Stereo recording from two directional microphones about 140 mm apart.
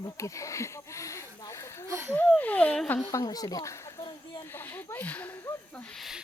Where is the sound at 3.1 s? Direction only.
25° left (ahead or behind).